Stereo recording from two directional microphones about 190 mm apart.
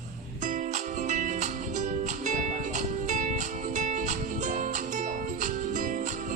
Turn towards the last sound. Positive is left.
turn(degrees=-45)  # may be behind; listen again after turning